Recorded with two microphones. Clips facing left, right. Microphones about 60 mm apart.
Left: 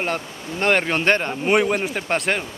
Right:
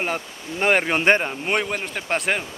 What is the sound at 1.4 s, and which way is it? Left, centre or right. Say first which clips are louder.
Speech: left 5 dB; centre.